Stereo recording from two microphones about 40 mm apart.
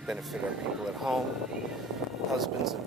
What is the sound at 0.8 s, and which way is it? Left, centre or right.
Speech, centre.